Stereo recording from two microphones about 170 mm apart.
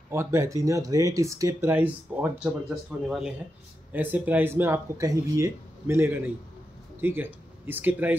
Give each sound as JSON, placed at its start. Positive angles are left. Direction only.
{"t": 0.1, "sound": "speech", "side_deg": -15}